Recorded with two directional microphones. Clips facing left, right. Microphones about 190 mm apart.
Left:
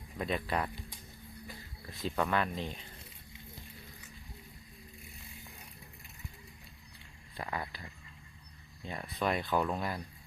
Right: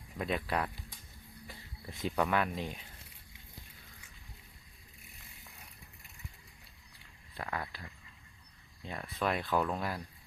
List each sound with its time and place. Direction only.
0.2 s speech: 5° right (ahead or behind)
1.9 s speech: 15° right (ahead or behind)
2.1 s speech: 5° right (ahead or behind)
7.3 s speech: 5° left (ahead or behind)